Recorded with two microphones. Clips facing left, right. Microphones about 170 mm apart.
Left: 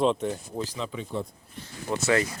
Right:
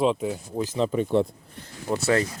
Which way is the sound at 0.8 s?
45° right (ahead or behind).